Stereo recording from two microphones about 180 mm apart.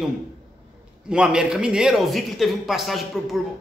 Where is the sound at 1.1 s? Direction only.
5° right (ahead or behind).